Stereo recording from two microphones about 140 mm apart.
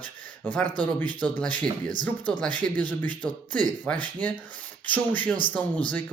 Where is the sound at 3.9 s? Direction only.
10° left (ahead or behind).